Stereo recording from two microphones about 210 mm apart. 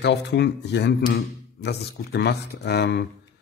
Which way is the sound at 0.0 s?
55° left (ahead or behind).